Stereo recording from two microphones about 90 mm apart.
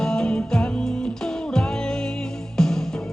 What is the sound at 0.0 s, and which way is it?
Music, 5° left (ahead or behind).